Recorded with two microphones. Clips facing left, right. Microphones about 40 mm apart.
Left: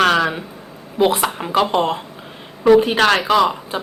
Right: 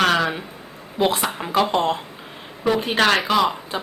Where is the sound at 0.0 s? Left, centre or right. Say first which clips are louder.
Left 3 dB; centre.